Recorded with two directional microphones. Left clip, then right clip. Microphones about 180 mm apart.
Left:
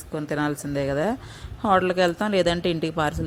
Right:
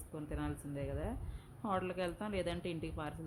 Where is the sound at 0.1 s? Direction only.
35° left (ahead or behind).